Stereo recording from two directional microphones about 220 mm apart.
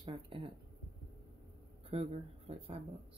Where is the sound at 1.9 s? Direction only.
25° right (ahead or behind).